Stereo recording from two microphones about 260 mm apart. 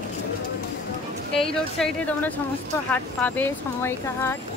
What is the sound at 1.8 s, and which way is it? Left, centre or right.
A woman's voice, centre.